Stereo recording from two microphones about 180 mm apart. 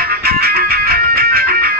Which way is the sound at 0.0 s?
55° right (ahead or behind).